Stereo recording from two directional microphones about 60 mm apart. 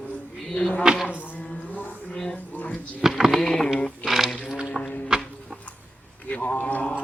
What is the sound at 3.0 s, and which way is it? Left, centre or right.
Typing, centre.